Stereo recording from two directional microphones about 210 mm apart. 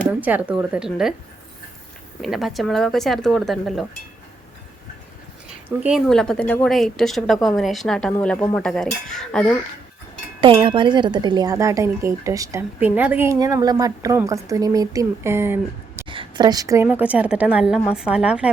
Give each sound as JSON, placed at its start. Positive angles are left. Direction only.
{"t": 0.1, "sound": "a woman's voice", "side_deg": -10}
{"t": 2.2, "sound": "a woman's voice", "side_deg": 0}
{"t": 5.6, "sound": "a woman's voice", "side_deg": -5}
{"t": 10.4, "sound": "speech", "side_deg": -25}
{"t": 16.0, "sound": "speech", "side_deg": -25}